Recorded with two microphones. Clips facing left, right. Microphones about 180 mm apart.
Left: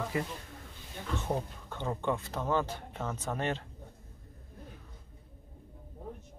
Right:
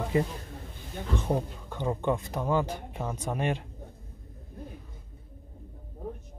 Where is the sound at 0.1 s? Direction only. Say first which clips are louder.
Right 9 dB; 25° right (ahead or behind).